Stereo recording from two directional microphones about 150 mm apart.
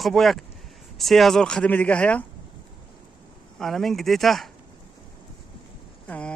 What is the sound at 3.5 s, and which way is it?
Speech, centre (ahead or behind).